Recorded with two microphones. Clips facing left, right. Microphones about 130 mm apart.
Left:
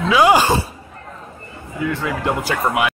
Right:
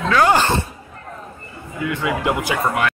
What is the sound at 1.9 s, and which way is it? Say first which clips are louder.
Speech: right 3 dB; 10° right (ahead or behind).